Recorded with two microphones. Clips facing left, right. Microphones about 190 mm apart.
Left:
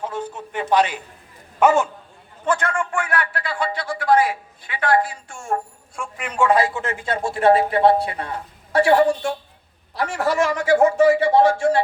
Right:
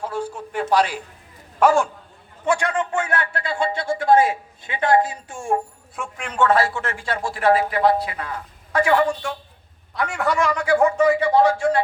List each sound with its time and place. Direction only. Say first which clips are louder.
0.0 s a sound: right 1 dB; 10° right (ahead or behind)
0.5 s a man's voice: left 1 dB; 5° right (ahead or behind)
1.5 s a man's voice: even; 5° left (ahead or behind)
2.4 s speech: right 1 dB; 15° right (ahead or behind)
6.0 s a man's voice: even; 5° left (ahead or behind); by 11.8 s 30° left (ahead or behind)